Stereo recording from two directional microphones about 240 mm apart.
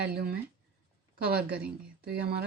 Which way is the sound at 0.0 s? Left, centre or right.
Right.